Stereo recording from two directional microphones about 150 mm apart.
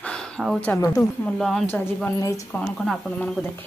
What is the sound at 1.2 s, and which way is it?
Speech, centre (ahead or behind).